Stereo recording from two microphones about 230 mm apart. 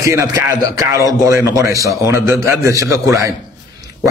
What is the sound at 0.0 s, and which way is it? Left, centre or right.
Speech, centre.